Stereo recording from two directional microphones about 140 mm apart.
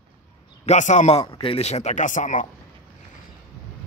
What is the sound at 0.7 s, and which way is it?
Speech, 60° left (ahead or behind).